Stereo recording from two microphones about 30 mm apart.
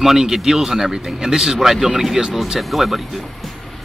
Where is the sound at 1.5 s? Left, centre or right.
Centre.